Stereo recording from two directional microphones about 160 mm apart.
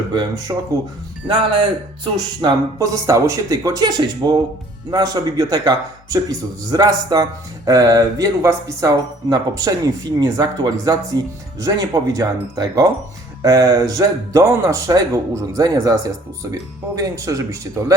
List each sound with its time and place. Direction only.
0.1 s a man's voice: 25° right (ahead or behind)